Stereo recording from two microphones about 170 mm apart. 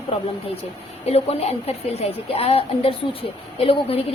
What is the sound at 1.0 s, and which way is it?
Speech, 35° left (ahead or behind).